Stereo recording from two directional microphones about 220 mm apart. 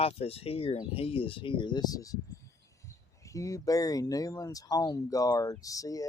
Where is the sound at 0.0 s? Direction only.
25° left (ahead or behind).